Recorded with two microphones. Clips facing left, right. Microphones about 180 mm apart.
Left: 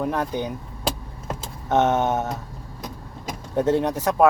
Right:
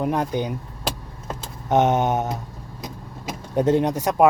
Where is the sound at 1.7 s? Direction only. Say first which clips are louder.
Right 1 dB; 15° right (ahead or behind).